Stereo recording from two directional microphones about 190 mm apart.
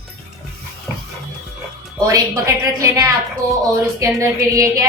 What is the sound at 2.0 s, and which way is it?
A woman's voice, 15° right (ahead or behind).